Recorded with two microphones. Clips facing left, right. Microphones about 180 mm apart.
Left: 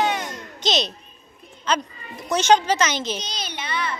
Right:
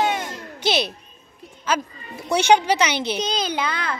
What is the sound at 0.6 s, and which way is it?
A woman's voice, 10° right (ahead or behind).